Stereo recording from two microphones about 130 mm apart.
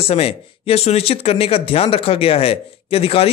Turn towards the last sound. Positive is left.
turn(degrees=50)  # may be behind; listen again after turning